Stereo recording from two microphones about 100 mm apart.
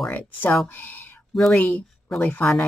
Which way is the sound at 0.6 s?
20° left (ahead or behind).